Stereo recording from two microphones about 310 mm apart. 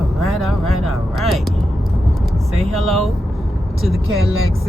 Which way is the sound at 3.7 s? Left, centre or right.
Centre.